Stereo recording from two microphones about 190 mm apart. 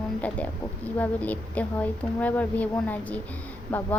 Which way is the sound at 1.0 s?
10° left (ahead or behind).